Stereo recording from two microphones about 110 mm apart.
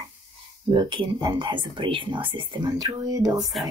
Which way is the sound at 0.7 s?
45° right (ahead or behind).